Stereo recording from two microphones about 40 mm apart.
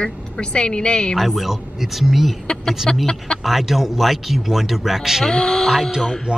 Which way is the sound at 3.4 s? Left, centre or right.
Centre.